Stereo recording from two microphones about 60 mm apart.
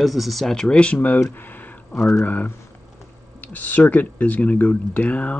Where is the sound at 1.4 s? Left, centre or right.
Left.